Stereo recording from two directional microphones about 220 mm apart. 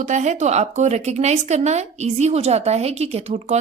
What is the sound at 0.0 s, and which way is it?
Speech, 35° right (ahead or behind).